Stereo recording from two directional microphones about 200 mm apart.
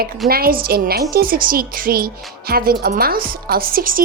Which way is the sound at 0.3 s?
50° right (ahead or behind).